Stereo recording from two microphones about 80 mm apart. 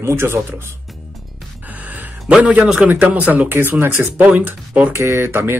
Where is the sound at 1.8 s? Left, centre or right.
Right.